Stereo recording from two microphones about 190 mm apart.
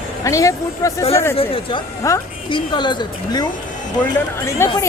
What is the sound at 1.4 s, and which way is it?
A woman's voice, 30° left (ahead or behind).